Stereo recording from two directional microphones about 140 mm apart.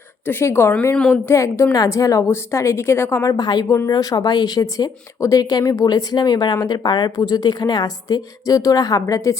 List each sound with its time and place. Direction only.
0.3 s speech: 15° left (ahead or behind)